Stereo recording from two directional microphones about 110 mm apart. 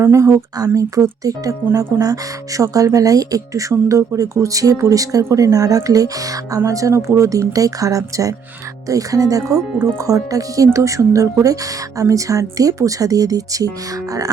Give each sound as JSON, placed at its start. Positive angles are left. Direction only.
{"t": 0.0, "sound": "speech", "side_deg": -25}